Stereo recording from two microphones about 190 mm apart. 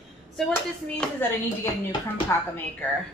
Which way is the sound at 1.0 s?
10° left (ahead or behind).